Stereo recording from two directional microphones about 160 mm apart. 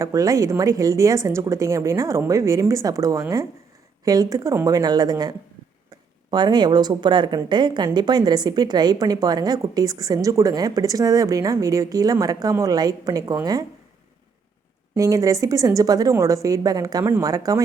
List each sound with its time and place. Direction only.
0.0 s a woman's voice: 20° right (ahead or behind)
6.3 s a woman's voice: 25° right (ahead or behind)
14.9 s a woman's voice: 20° right (ahead or behind)